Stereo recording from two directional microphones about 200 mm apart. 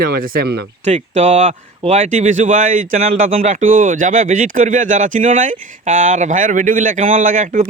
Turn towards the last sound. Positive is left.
turn(degrees=-40)  # may be behind; listen again after turning